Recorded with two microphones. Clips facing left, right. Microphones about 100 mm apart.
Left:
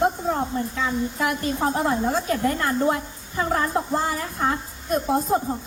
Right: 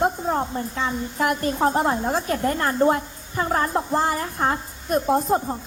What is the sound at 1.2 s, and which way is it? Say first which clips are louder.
A woman's voice: right 5 dB; 45° right (ahead or behind).